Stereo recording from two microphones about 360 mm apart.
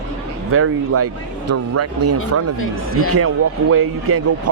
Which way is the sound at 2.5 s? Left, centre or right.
Left.